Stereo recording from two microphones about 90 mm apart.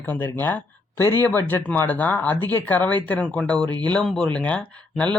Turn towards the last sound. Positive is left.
turn(degrees=15)  # may be behind; listen again after turning